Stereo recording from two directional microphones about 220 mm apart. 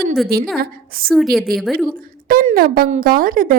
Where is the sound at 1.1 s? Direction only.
Centre (ahead or behind).